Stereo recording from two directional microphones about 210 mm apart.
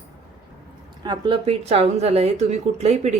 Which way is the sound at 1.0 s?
20° right (ahead or behind).